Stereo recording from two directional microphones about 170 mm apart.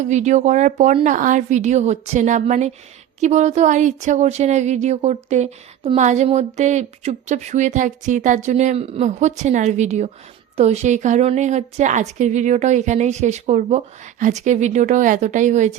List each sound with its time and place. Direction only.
0.0 s a woman's voice: 45° right (ahead or behind)